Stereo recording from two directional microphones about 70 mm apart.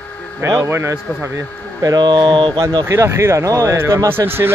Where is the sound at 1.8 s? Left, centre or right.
Right.